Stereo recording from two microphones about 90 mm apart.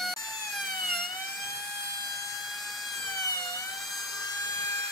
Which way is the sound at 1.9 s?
45° left (ahead or behind).